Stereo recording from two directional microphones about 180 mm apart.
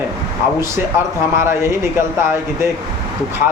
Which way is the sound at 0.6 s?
15° right (ahead or behind).